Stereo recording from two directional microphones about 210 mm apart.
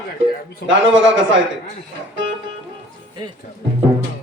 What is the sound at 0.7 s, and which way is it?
Speech, 65° right (ahead or behind).